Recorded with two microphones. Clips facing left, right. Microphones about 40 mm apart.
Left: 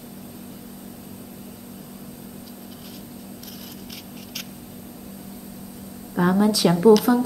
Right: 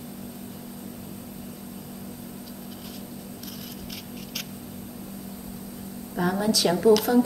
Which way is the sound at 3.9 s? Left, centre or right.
Centre.